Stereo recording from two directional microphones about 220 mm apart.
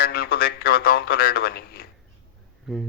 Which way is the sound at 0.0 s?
45° left (ahead or behind).